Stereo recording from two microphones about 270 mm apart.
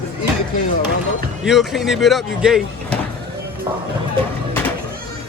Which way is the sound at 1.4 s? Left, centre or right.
Centre.